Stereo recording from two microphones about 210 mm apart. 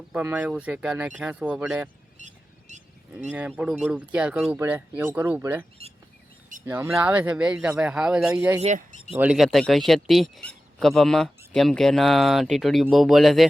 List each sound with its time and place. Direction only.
0.1 s speech: 10° right (ahead or behind)
2.1 s a sound: 35° right (ahead or behind)
3.3 s a man's voice: 5° right (ahead or behind)
6.7 s speech: 15° right (ahead or behind)
8.6 s speech: 35° right (ahead or behind)
9.1 s a man's voice: 5° right (ahead or behind)